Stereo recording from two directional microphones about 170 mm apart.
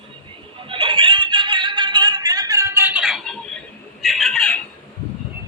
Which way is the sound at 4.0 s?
Centre (ahead or behind).